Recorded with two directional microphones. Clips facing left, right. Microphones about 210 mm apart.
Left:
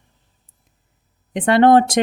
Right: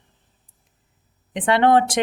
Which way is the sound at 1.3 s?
40° left (ahead or behind).